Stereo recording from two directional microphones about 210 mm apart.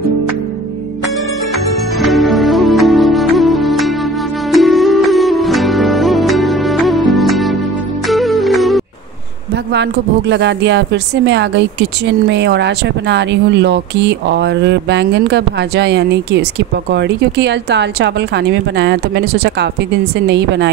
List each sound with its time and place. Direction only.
2.0 s music: centre (ahead or behind)
9.7 s speech: 55° right (ahead or behind)